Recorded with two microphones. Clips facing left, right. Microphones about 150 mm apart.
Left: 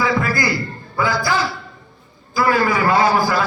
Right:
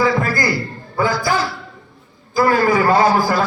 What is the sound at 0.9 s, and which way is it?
Speech, 45° right (ahead or behind).